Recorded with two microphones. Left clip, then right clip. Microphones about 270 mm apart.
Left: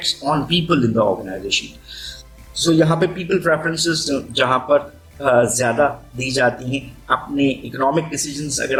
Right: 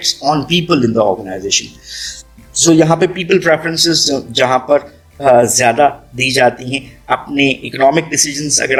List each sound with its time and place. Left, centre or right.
0.2 s speech: right